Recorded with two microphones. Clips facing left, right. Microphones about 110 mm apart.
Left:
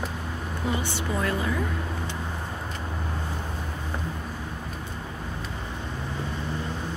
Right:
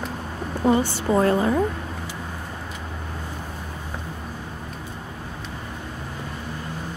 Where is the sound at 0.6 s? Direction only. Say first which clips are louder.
Right 10 dB; 40° right (ahead or behind).